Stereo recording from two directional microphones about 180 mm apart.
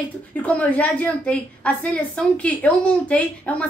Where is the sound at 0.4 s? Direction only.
10° left (ahead or behind).